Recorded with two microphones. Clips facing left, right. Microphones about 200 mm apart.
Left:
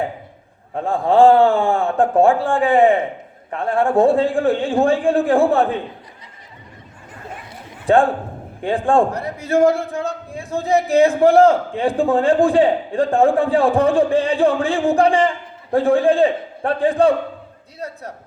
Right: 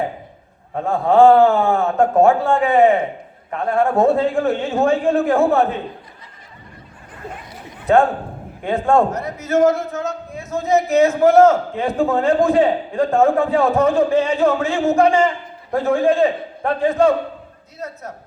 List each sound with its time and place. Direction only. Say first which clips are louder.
0.9 s a man's voice: right 1 dB; 30° left (ahead or behind)
8.6 s a man's voice: even; 30° left (ahead or behind)